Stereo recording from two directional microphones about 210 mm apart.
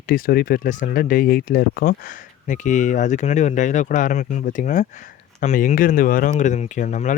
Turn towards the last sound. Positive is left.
turn(degrees=35)  # may be behind; listen again after turning